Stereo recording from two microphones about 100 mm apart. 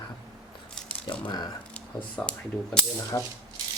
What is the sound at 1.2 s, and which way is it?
Speech, 45° left (ahead or behind).